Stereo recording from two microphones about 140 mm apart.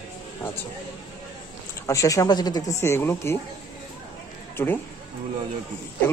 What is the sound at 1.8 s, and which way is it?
Speech, 25° left (ahead or behind).